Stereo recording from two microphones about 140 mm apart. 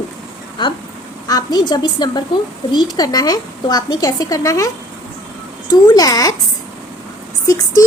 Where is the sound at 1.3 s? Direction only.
25° left (ahead or behind).